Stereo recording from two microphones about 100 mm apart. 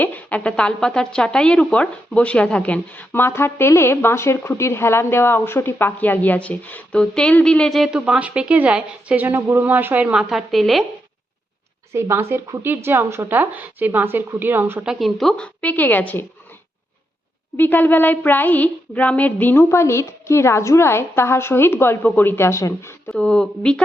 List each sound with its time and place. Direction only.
0.0 s a woman's voice: 15° left (ahead or behind)
11.9 s a woman's voice: 25° right (ahead or behind)
14.8 s speech: centre (ahead or behind)
15.6 s speech: 15° left (ahead or behind)
17.6 s a sound: 20° left (ahead or behind)
23.1 s speech: 10° left (ahead or behind)